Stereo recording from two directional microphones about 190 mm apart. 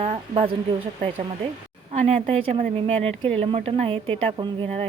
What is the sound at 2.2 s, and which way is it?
A woman's voice, 30° right (ahead or behind).